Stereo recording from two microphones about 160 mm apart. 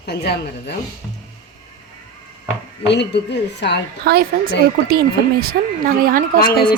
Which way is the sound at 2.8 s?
90° left.